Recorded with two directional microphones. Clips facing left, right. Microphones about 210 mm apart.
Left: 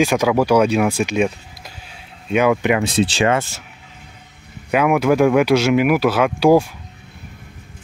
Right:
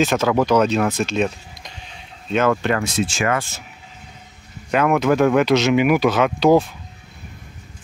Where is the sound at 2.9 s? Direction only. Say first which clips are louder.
Left 4 dB; 35° left (ahead or behind).